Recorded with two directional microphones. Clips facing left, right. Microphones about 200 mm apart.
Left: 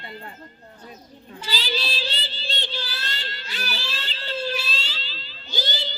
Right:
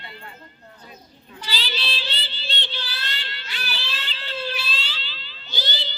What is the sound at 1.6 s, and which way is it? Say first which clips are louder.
Child singing: left 5 dB; 40° left (ahead or behind).